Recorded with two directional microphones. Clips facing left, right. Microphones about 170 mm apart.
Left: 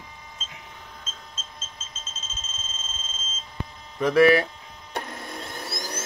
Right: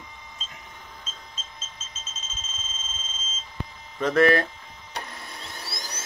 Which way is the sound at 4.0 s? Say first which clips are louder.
Left 2 dB; 10° left (ahead or behind).